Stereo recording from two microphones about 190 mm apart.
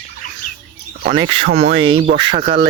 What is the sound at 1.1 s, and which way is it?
Speech, 25° right (ahead or behind).